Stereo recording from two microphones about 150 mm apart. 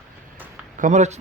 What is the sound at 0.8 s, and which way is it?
Speech, 55° right (ahead or behind).